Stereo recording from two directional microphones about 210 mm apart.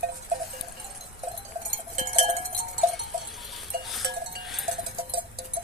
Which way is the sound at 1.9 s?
30° right (ahead or behind).